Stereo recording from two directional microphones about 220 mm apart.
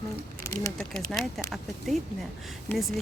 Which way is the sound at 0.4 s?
10° left (ahead or behind).